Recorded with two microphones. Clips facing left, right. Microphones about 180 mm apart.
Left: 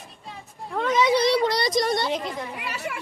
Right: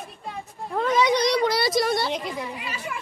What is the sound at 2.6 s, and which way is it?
Children playing, 70° left (ahead or behind).